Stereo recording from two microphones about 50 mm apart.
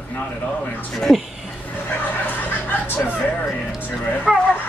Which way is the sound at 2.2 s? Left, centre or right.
Left.